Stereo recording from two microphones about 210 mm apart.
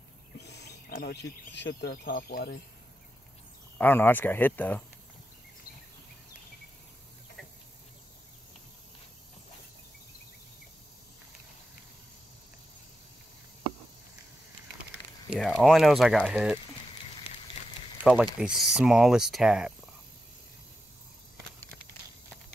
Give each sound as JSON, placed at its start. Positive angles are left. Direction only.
{"t": 0.5, "sound": "speech", "side_deg": 50}
{"t": 3.7, "sound": "speech", "side_deg": 10}
{"t": 15.2, "sound": "speech", "side_deg": 0}
{"t": 18.0, "sound": "speech", "side_deg": -5}